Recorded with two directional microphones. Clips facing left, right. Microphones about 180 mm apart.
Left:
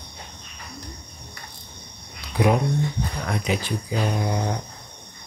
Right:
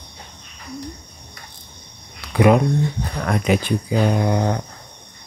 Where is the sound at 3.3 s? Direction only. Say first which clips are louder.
Right 8 dB; 55° right (ahead or behind).